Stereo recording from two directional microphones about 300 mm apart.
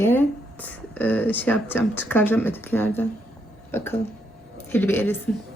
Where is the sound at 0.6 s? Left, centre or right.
Centre.